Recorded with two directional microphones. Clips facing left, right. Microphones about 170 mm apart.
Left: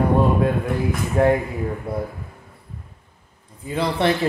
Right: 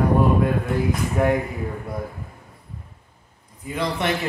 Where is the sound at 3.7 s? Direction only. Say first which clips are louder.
Left 4 dB; 30° left (ahead or behind).